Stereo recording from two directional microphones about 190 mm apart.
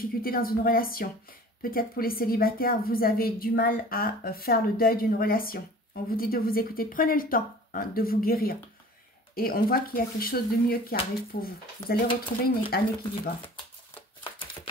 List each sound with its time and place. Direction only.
0.0 s a woman's voice: 50° left (ahead or behind)